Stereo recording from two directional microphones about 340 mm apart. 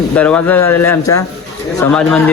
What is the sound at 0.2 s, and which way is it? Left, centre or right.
Speech, centre.